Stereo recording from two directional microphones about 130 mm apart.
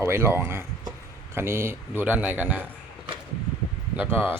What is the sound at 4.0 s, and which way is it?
Speech, 15° right (ahead or behind).